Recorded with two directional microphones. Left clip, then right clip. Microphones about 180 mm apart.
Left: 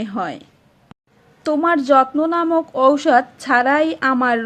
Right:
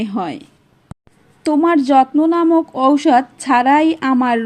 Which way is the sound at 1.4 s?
10° right (ahead or behind).